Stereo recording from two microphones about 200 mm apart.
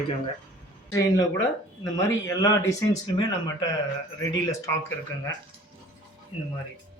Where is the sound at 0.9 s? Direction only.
15° left (ahead or behind).